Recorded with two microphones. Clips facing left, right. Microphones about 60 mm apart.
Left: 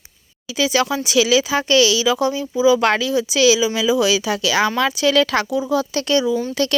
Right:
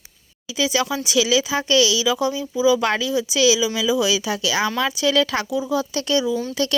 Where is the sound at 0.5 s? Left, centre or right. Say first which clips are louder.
Left 3 dB; left.